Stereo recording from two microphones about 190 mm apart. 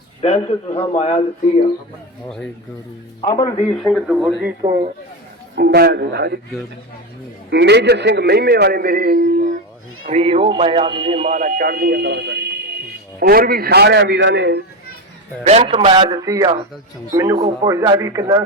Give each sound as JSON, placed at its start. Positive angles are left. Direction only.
{"t": 0.2, "sound": "a man's voice", "side_deg": 35}
{"t": 3.2, "sound": "a man's voice", "side_deg": 20}
{"t": 3.7, "sound": "speech", "side_deg": 5}
{"t": 4.6, "sound": "speech", "side_deg": -25}
{"t": 5.5, "sound": "a man's voice", "side_deg": -55}
{"t": 7.5, "sound": "a man's voice", "side_deg": -65}
{"t": 10.1, "sound": "a man's voice", "side_deg": -35}
{"t": 15.4, "sound": "speech", "side_deg": -30}